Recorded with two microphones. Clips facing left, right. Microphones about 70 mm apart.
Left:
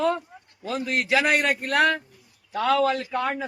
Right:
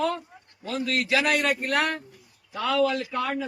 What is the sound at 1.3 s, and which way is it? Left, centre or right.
A man's voice, left.